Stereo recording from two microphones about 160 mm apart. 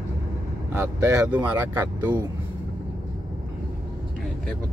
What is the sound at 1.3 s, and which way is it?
Speech, 10° right (ahead or behind).